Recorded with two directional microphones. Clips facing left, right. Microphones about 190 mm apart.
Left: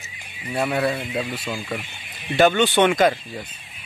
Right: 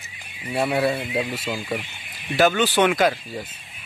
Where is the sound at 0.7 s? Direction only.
25° right (ahead or behind).